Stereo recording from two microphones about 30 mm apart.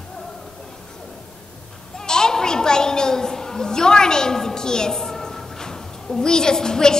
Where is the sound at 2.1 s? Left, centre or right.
Left.